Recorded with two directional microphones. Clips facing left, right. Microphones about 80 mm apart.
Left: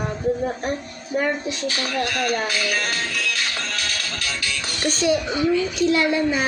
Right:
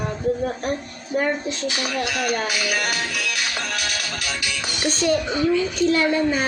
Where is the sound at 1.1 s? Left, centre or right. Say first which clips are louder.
Even; centre.